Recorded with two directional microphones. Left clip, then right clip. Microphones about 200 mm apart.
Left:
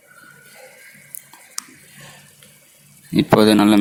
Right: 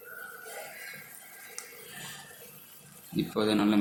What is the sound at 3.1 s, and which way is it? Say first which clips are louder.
Speech: left 15 dB; 50° left (ahead or behind).